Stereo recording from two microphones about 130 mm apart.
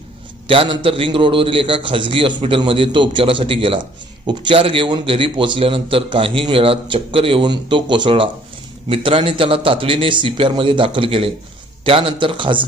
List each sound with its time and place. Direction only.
0.4 s a man's voice: 40° right (ahead or behind)